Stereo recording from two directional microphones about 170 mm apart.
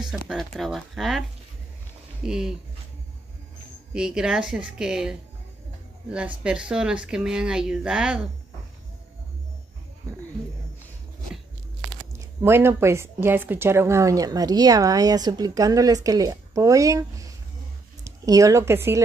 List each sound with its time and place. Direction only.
0.0 s speech: 5° right (ahead or behind)
2.2 s speech: 5° right (ahead or behind)
3.9 s speech: 5° right (ahead or behind)
12.1 s a woman's voice: 15° right (ahead or behind)